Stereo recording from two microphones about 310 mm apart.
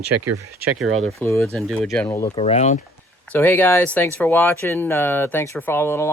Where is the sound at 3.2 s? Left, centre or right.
Centre.